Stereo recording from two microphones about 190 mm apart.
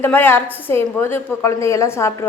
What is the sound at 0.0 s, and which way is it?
A woman's voice, 10° left (ahead or behind).